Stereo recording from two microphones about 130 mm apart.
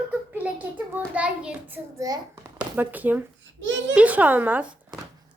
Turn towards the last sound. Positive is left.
turn(degrees=-15)  # may be behind; listen again after turning